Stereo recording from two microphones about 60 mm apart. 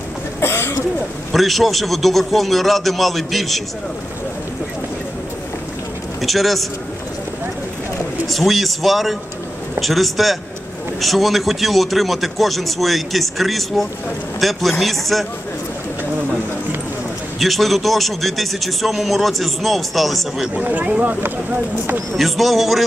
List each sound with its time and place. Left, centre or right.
0.4 s throat clearing: left
1.3 s a man's voice: centre
6.2 s a man's voice: centre
8.3 s a man's voice: centre
17.4 s a man's voice: centre
20.5 s speech: right
21.2 s speech: right
22.1 s a man's voice: centre